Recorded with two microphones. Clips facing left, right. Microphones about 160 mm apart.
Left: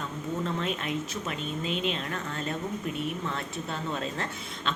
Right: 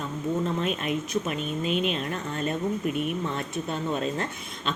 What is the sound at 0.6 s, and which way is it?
Speech, 15° right (ahead or behind).